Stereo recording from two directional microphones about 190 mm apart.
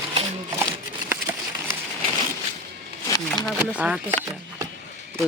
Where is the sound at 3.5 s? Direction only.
5° right (ahead or behind).